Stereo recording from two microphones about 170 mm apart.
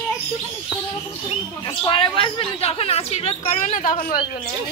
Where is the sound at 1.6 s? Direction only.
30° left (ahead or behind); by 4.1 s 55° left (ahead or behind).